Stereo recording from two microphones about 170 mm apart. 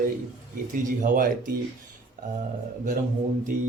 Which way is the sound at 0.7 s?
55° right (ahead or behind).